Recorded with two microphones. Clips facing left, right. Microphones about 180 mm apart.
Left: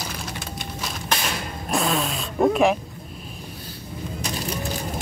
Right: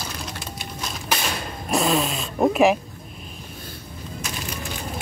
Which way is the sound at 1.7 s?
5° right (ahead or behind).